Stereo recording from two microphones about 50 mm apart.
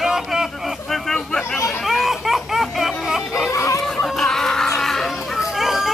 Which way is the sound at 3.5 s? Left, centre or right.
Left.